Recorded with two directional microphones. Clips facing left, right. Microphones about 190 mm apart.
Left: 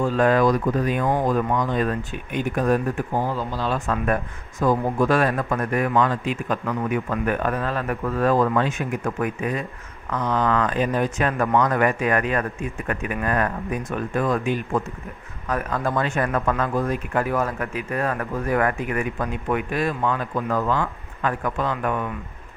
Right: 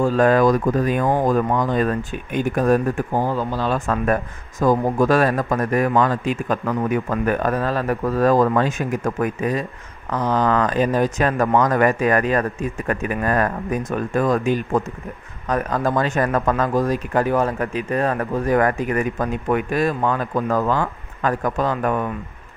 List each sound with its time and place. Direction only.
0.0 s speech: 40° right (ahead or behind)